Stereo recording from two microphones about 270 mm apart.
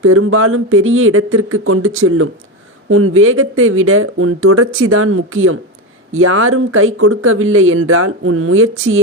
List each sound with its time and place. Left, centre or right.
0.0 s speech: right